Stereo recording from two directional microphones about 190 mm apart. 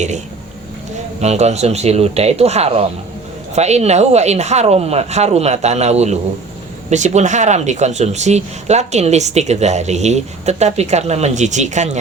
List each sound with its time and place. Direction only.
1.2 s speech: 35° right (ahead or behind)